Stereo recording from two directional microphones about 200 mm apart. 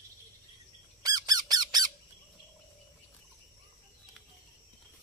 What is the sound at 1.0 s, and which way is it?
Squawk, 20° right (ahead or behind).